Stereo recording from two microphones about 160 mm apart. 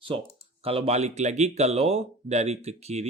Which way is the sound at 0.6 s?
40° right (ahead or behind).